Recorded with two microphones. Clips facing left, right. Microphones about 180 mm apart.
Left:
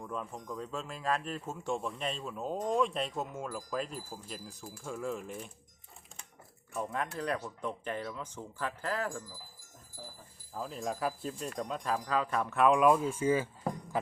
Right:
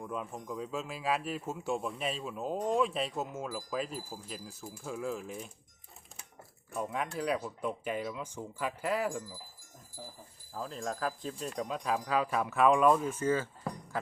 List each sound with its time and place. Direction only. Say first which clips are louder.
0.0 s speech: right 1 dB; 5° right (ahead or behind)
6.7 s speech: right 1 dB; 5° right (ahead or behind)
10.5 s speech: left 1 dB; 5° left (ahead or behind)
13.9 s music: left 3 dB; 15° left (ahead or behind)